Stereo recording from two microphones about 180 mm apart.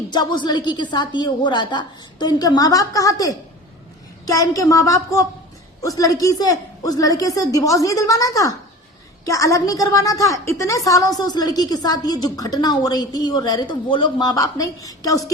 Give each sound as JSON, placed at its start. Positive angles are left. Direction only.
{"t": 0.1, "sound": "a woman's voice", "side_deg": 25}